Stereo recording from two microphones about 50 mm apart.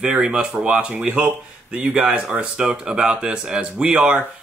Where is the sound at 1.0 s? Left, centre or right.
Right.